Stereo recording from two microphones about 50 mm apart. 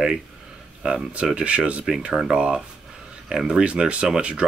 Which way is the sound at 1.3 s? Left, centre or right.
Right.